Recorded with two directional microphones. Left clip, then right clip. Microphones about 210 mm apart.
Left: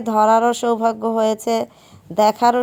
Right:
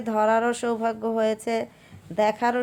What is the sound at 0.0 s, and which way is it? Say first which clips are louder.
Speech: left 7 dB; 20° left (ahead or behind).